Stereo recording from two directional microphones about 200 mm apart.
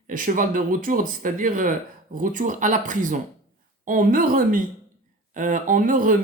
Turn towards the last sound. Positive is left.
turn(degrees=-40)  # may be behind; listen again after turning